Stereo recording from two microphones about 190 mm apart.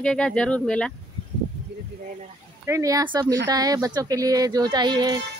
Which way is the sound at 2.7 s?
15° right (ahead or behind).